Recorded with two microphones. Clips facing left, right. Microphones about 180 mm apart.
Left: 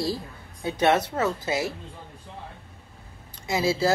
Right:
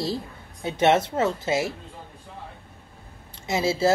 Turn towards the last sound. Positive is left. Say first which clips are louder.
# right 1 dB
turn(degrees=-25)  # may be behind; listen again after turning